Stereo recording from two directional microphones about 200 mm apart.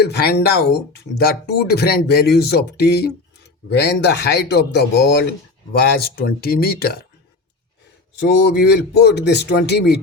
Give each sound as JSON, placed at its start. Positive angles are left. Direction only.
{"t": 0.0, "sound": "a man's voice", "side_deg": 55}
{"t": 8.2, "sound": "a man's voice", "side_deg": 55}